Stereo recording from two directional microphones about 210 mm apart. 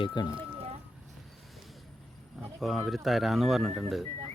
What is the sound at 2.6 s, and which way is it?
Speech, centre (ahead or behind).